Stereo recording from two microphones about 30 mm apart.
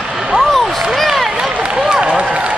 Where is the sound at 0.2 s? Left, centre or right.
Centre.